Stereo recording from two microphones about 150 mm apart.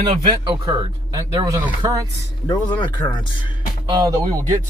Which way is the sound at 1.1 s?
20° right (ahead or behind).